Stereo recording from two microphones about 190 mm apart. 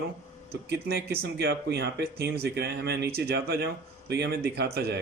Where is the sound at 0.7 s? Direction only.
55° right (ahead or behind).